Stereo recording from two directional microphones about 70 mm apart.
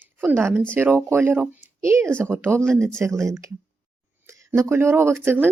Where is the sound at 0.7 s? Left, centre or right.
Right.